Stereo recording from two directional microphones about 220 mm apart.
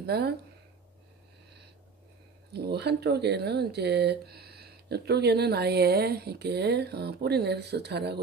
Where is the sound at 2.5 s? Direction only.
50° right (ahead or behind).